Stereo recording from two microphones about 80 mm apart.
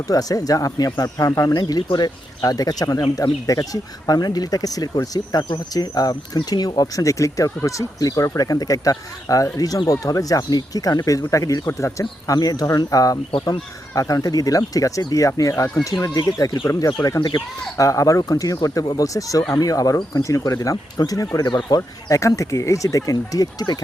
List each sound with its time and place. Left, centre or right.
0.1 s speech: left
1.5 s speech: left
17.2 s speech: left
17.7 s speech: left